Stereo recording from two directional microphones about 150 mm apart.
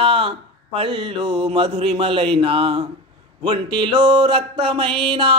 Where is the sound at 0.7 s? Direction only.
40° right (ahead or behind).